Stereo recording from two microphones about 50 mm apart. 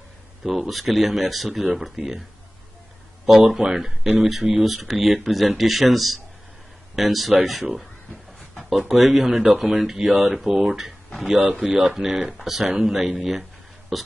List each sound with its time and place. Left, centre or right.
0.4 s speech: centre
3.4 s speech: centre